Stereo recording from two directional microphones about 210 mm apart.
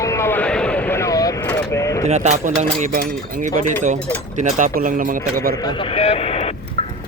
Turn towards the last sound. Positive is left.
turn(degrees=30)  # may be behind; listen again after turning